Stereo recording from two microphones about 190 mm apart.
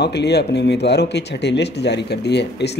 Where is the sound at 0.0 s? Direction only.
60° left (ahead or behind).